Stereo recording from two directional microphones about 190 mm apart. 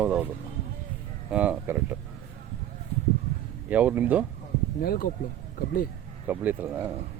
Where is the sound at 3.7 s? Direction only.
10° right (ahead or behind).